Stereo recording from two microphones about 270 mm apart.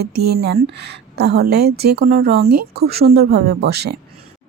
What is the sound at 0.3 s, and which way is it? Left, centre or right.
A woman's voice, right.